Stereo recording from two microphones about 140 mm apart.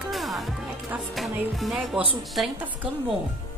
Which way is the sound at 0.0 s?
Centre (ahead or behind).